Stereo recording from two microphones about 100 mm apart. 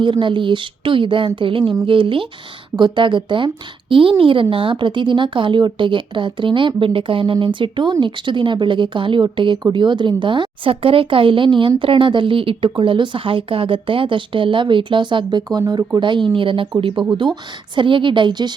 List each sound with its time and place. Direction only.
0.0 s a woman's voice: 55° right (ahead or behind)
15.4 s speech: 40° right (ahead or behind)
16.0 s a woman's voice: 55° right (ahead or behind)